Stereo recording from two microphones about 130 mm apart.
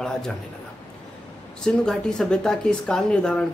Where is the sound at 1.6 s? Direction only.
5° left (ahead or behind).